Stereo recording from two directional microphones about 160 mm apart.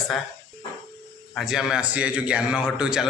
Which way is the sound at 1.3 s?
Centre (ahead or behind).